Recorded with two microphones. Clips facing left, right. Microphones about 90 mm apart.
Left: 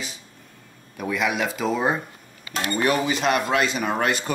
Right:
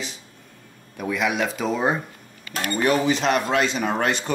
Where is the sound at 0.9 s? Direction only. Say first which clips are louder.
Right 1 dB; centre (ahead or behind).